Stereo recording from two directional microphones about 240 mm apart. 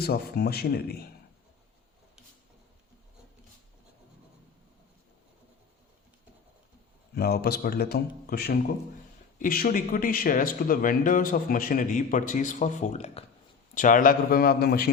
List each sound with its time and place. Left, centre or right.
0.0 s speech: left
7.2 s speech: left